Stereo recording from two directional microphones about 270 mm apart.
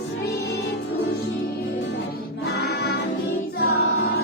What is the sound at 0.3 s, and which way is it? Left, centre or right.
Music, left.